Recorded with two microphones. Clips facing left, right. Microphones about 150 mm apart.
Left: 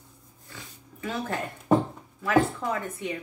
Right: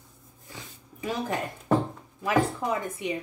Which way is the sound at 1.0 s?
15° right (ahead or behind).